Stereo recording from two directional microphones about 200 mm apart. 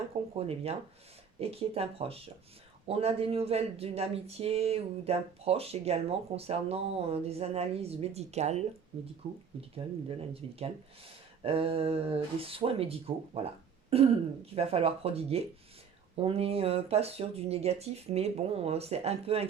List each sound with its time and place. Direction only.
0.3 s speech: 30° right (ahead or behind)